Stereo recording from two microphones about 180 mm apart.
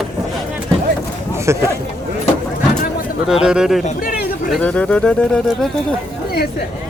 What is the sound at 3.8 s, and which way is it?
Speech, 45° left (ahead or behind).